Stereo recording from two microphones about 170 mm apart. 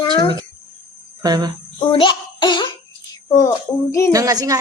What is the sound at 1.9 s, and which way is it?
Speech, 30° left (ahead or behind).